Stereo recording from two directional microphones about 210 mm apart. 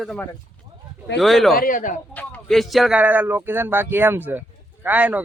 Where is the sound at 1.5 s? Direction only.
40° left (ahead or behind).